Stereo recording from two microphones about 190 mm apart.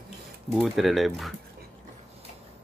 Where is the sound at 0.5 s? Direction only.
Centre (ahead or behind).